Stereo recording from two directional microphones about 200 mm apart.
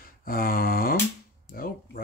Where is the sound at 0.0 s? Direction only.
45° left (ahead or behind).